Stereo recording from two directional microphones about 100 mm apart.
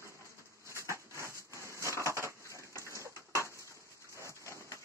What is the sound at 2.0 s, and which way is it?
Splinter, 30° left (ahead or behind).